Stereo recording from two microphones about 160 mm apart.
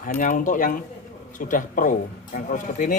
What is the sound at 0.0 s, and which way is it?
Speech, 55° left (ahead or behind).